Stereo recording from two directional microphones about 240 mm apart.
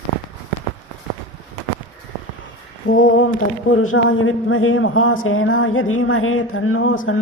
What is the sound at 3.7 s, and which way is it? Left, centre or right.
Speech, left.